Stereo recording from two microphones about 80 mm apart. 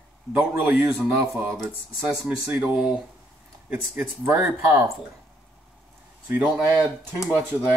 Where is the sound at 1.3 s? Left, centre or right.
Centre.